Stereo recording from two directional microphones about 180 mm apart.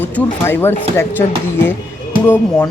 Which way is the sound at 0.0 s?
10° left (ahead or behind).